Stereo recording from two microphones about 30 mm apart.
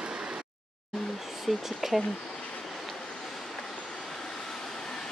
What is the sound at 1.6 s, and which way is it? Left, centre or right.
Speech, centre.